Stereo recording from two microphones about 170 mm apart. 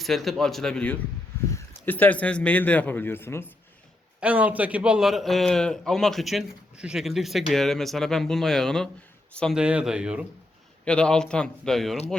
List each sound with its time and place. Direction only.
0.0 s a man's voice: centre (ahead or behind)
4.2 s a man's voice: 10° right (ahead or behind)
9.6 s a man's voice: 5° right (ahead or behind)
10.8 s a man's voice: 5° left (ahead or behind)